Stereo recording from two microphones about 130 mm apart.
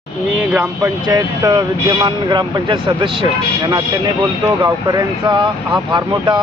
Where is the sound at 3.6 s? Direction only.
25° right (ahead or behind).